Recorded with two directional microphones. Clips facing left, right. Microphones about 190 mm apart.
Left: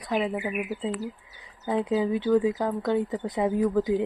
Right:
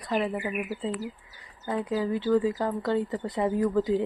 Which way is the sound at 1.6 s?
20° left (ahead or behind).